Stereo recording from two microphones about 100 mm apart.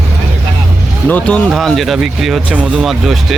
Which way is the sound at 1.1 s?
15° left (ahead or behind).